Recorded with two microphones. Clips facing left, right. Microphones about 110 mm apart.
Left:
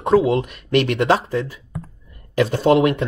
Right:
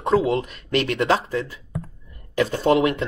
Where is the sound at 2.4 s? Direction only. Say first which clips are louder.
Left 3 dB; 25° left (ahead or behind).